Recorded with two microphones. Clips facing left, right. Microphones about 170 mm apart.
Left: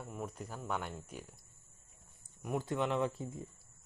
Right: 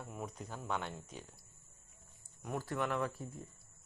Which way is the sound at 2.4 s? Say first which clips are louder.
Left 3 dB; 15° left (ahead or behind).